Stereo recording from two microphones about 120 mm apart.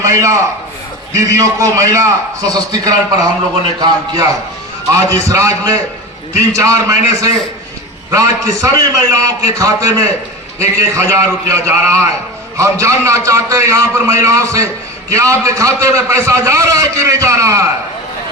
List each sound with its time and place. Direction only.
0.0 s a man's voice: 25° right (ahead or behind)
4.9 s a man's voice: 25° right (ahead or behind)